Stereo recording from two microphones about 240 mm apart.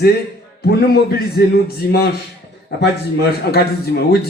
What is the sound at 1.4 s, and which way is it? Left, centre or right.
A man's voice, left.